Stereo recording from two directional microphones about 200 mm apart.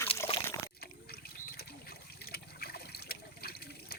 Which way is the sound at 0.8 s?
50° left (ahead or behind).